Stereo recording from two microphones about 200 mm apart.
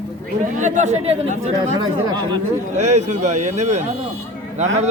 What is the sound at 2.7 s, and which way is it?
Speech, 35° right (ahead or behind).